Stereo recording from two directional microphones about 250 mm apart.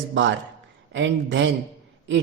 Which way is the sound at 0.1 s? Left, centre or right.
Right.